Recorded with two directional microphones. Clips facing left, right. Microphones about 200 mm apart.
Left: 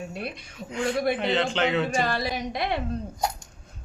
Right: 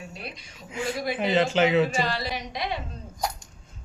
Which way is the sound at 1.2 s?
5° right (ahead or behind).